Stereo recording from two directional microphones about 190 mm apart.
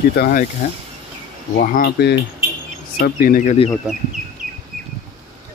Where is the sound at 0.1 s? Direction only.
50° left (ahead or behind).